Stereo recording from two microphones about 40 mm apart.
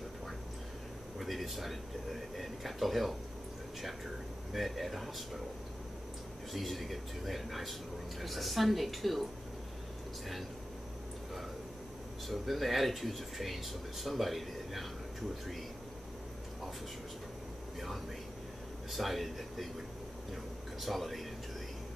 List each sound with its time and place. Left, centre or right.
1.1 s speech: centre
4.5 s speech: centre
6.5 s speech: centre
12.3 s speech: centre
18.9 s speech: centre
20.8 s speech: centre